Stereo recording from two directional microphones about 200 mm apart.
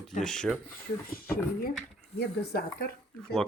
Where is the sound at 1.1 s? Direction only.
45° left (ahead or behind).